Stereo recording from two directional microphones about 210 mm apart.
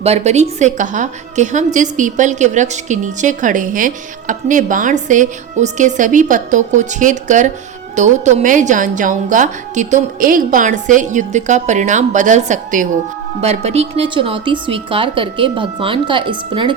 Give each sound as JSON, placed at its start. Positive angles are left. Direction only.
{"t": 0.0, "sound": "a woman's voice", "side_deg": -30}